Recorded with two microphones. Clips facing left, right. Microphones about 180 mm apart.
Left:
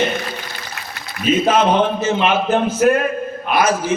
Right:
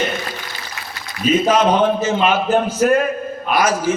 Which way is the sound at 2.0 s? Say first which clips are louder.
Even; 40° right (ahead or behind).